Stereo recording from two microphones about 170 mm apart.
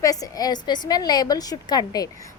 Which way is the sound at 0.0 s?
20° left (ahead or behind).